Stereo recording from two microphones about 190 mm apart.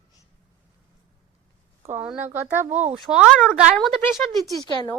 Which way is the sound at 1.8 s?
10° right (ahead or behind).